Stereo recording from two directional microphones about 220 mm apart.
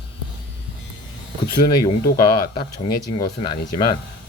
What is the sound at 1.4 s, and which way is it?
Speech, 20° left (ahead or behind).